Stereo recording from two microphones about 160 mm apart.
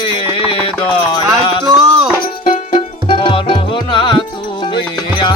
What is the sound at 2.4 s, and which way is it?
Music, 55° left (ahead or behind).